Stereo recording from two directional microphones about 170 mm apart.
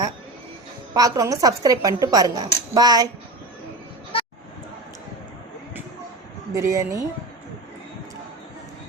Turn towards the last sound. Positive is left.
turn(degrees=-15)  # may be behind; listen again after turning